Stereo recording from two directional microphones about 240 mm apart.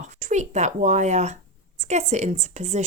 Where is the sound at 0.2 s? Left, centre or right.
Right.